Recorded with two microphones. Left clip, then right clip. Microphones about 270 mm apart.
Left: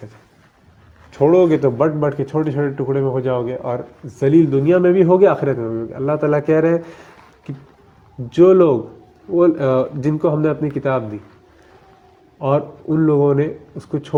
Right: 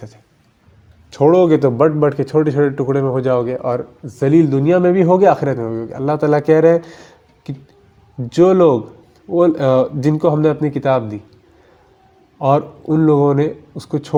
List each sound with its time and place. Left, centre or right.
1.1 s a man's voice: right
8.3 s speech: right
12.4 s a man's voice: right